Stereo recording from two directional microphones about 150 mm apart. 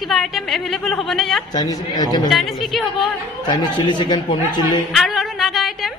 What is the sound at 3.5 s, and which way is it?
A man's voice, 30° left (ahead or behind).